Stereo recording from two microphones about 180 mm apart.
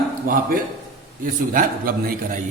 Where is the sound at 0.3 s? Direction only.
55° right (ahead or behind).